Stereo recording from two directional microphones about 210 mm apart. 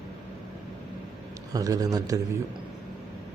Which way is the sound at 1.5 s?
15° right (ahead or behind).